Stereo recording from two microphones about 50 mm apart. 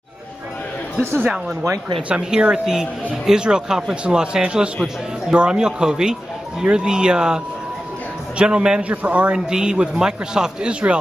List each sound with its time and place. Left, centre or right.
2.0 s a man's voice: right
8.8 s a man's voice: right
9.5 s speech: centre